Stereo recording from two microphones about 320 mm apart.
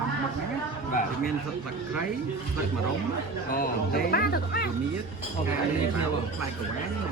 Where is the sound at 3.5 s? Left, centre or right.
Left.